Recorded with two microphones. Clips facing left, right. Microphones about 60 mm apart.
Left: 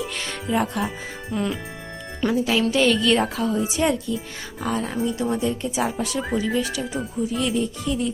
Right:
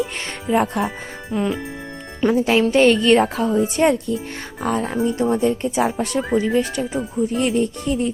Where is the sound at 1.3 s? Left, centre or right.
Centre.